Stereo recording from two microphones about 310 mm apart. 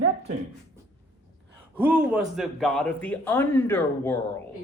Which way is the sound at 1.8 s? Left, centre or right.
Centre.